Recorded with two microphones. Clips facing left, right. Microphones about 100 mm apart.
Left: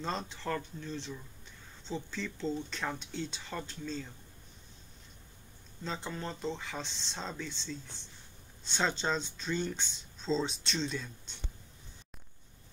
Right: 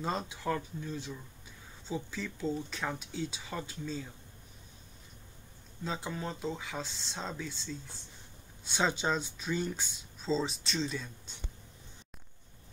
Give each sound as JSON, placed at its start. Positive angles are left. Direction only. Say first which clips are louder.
{"t": 0.0, "sound": "speech", "louder": "right 2 dB", "side_deg": -10}
{"t": 5.9, "sound": "speech", "louder": "right 1 dB", "side_deg": -5}